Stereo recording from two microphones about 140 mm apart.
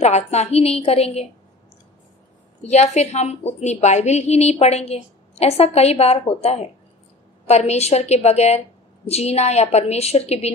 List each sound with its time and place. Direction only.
0.0 s a woman's voice: 50° left (ahead or behind)
2.6 s a woman's voice: 50° left (ahead or behind)